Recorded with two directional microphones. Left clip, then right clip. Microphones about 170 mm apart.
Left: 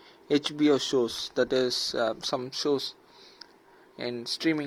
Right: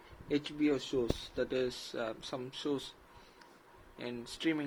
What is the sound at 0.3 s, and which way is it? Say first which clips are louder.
Speech: left 9 dB; 55° left (ahead or behind).